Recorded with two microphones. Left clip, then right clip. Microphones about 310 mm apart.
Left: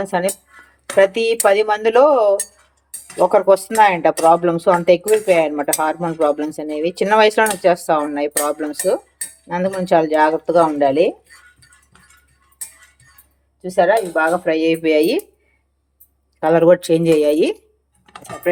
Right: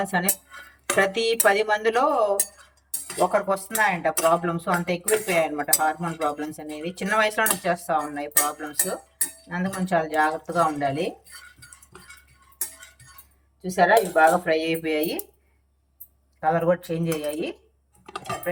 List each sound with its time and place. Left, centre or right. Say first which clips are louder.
0.0 s speech: left 6 dB; centre
3.3 s speech: left 11 dB; left
13.6 s speech: left 4 dB; centre
16.5 s speech: left 10 dB; left